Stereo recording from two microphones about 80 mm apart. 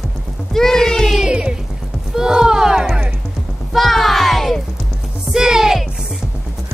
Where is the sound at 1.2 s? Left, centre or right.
Centre.